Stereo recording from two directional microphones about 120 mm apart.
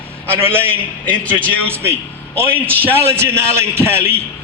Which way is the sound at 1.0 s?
10° left (ahead or behind).